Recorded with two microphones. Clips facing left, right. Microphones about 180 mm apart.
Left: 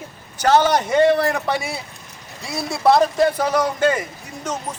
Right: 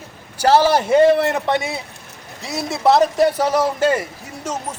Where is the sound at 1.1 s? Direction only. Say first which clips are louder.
Right 2 dB; 25° right (ahead or behind).